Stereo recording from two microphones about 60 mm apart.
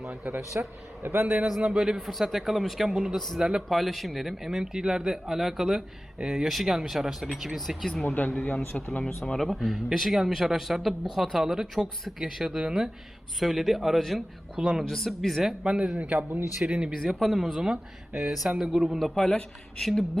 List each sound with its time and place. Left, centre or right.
0.1 s speech: right
1.0 s a man's voice: right
1.7 s speech: centre
8.0 s speech: left
8.7 s speech: centre
14.8 s speech: centre
15.6 s speech: centre
16.0 s a man's voice: right
16.6 s speech: centre
17.0 s speech: centre
19.0 s speech: centre